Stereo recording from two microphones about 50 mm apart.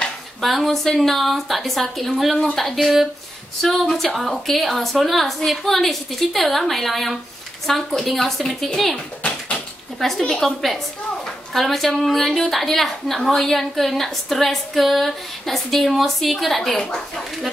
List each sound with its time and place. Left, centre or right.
0.4 s a woman's voice: centre
8.9 s a sound: left
9.9 s a woman's voice: centre